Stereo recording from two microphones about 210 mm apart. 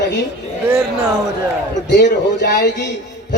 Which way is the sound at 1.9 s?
55° left (ahead or behind).